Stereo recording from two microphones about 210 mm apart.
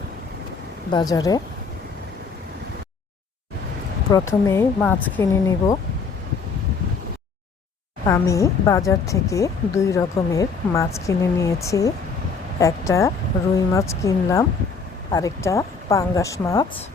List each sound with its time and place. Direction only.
0.9 s speech: 20° left (ahead or behind)
4.1 s speech: 15° left (ahead or behind)
8.0 s speech: 15° left (ahead or behind)